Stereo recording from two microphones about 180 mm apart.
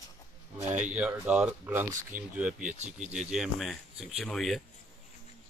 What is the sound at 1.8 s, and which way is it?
Speech, 45° right (ahead or behind).